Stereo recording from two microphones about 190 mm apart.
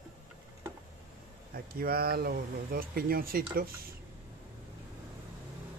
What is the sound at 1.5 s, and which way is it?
Speech, 55° right (ahead or behind).